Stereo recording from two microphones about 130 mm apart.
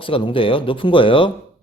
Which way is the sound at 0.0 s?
45° left (ahead or behind).